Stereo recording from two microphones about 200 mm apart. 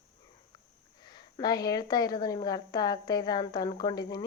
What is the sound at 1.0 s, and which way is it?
A woman's voice, 20° left (ahead or behind).